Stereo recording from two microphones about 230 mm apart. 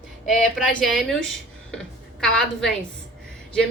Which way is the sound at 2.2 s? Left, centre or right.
Centre.